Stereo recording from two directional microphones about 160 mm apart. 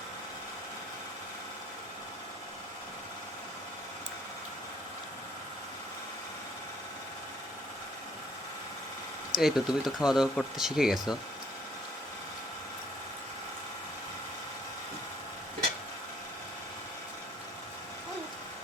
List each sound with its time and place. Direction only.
9.3 s speech: centre (ahead or behind)